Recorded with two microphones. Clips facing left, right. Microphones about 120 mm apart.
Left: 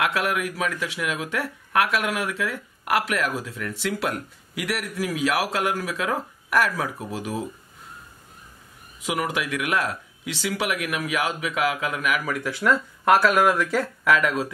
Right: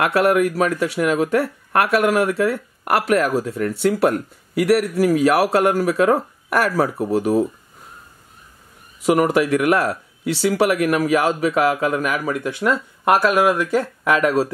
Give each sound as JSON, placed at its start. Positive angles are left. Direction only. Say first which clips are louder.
{"t": 0.0, "sound": "speech", "louder": "right 8 dB", "side_deg": -50}
{"t": 9.0, "sound": "speech", "louder": "right 10 dB", "side_deg": -50}
{"t": 14.0, "sound": "speech", "louder": "right 4 dB", "side_deg": -30}